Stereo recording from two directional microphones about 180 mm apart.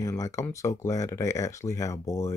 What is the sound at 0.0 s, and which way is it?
Speech, 20° left (ahead or behind).